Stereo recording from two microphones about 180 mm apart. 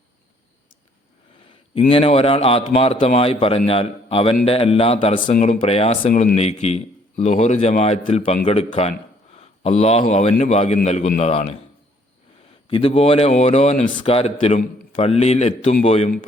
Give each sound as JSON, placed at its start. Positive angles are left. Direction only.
{"t": 1.7, "sound": "speech", "side_deg": 30}
{"t": 12.6, "sound": "speech", "side_deg": 30}